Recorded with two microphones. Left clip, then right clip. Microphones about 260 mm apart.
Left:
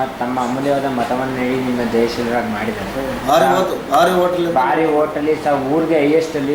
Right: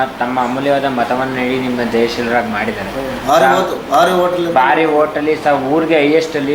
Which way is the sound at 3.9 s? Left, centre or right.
Centre.